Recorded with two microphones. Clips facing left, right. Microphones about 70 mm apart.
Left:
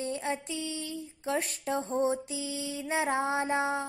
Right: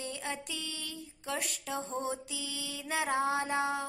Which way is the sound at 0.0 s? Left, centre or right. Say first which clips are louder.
Left 6 dB; left.